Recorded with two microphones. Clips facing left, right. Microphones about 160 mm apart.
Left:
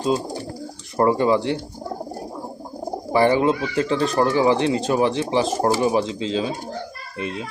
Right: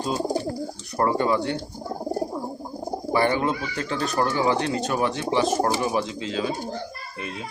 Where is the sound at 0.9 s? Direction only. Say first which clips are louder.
Left 4 dB; 25° left (ahead or behind).